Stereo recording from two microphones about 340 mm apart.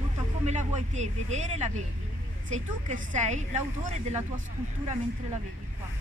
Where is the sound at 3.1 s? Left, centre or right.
Right.